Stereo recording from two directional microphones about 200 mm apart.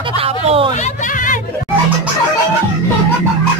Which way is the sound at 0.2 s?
30° right (ahead or behind).